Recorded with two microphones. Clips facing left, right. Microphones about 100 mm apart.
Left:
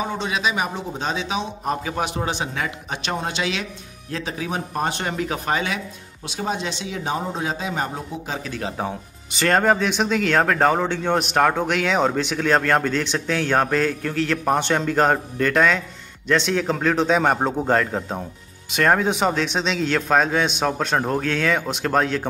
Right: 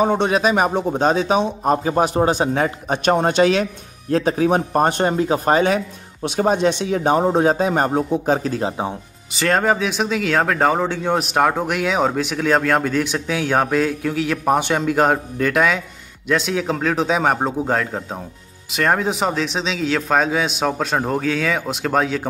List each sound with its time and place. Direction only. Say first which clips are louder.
0.0 s a man's voice: right 8 dB; 50° right (ahead or behind)
5.0 s speech: right 8 dB; 30° right (ahead or behind)
5.4 s a man's voice: right 9 dB; 45° right (ahead or behind)
6.2 s a man's voice: right 9 dB; 55° right (ahead or behind); by 8.6 s 40° right (ahead or behind)
9.3 s speech: even; centre (ahead or behind)